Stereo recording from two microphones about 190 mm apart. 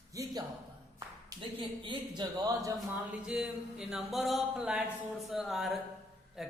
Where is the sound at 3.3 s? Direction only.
5° right (ahead or behind).